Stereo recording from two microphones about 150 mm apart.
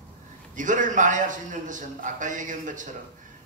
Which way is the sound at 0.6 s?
60° right (ahead or behind).